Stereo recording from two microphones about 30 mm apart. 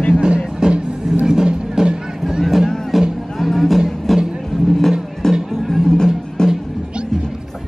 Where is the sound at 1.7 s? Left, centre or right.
Right.